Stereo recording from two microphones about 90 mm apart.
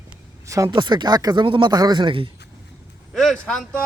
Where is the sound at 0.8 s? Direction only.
55° right (ahead or behind).